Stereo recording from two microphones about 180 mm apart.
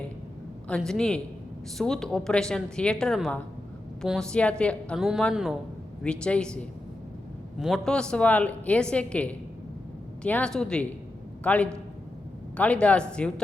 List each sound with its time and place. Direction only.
0.7 s a woman's voice: 5° left (ahead or behind)